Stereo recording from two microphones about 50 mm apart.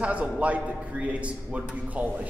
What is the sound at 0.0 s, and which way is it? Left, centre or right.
A man's voice, right.